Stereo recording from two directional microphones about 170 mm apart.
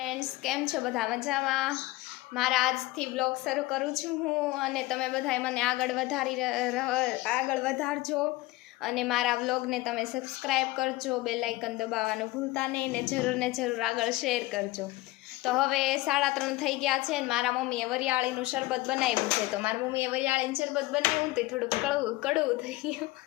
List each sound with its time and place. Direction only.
0.0 s a woman's voice: centre (ahead or behind)